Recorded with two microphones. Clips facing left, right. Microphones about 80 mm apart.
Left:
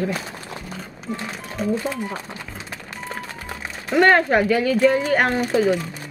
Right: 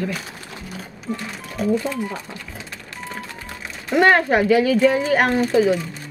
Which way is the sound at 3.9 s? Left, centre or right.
Centre.